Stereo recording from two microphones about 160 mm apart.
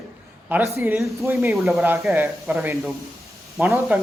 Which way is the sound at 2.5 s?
10° right (ahead or behind).